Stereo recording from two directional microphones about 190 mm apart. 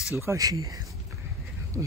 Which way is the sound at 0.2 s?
15° right (ahead or behind).